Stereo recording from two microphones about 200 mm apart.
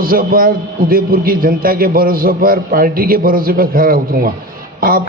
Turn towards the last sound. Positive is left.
turn(degrees=-45)  # may be behind; listen again after turning